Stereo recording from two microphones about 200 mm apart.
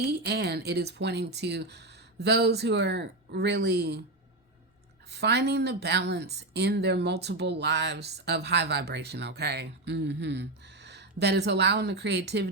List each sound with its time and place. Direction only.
0.0 s speech: 55° right (ahead or behind)
5.1 s speech: 55° right (ahead or behind)